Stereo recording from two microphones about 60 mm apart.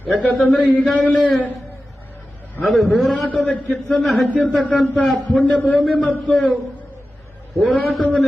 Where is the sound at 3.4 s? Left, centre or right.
Left.